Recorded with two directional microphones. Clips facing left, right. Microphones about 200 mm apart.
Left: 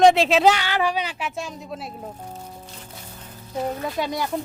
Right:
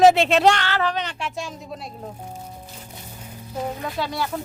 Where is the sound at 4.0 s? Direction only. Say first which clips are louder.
Even; 20° left (ahead or behind).